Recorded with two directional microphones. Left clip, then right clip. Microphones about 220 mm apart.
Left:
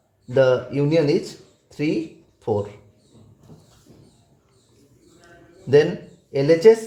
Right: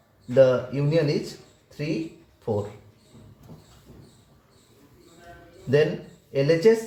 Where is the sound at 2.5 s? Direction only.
40° left (ahead or behind).